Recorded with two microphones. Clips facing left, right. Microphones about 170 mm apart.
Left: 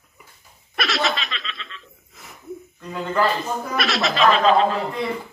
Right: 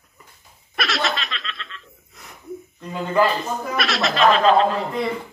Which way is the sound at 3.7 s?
Centre (ahead or behind).